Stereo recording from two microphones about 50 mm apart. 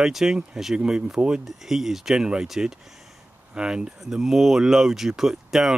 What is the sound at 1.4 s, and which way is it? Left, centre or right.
Speech, centre.